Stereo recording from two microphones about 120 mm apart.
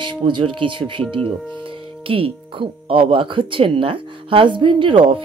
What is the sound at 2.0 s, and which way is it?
Speech, 50° right (ahead or behind).